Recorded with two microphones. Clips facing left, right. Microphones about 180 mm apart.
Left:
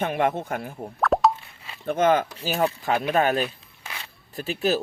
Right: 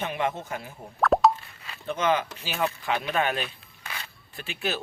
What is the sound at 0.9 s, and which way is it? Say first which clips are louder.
Plop: even; centre (ahead or behind).